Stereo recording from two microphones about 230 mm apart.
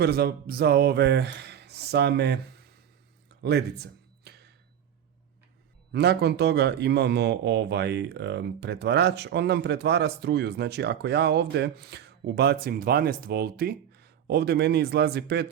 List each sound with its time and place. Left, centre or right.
0.0 s speech: right
3.4 s a sound: right
5.9 s speech: right